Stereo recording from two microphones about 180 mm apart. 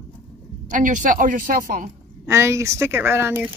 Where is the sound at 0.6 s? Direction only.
45° right (ahead or behind).